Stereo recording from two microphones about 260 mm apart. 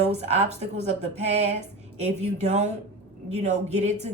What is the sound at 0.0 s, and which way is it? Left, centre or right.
A woman's voice, right.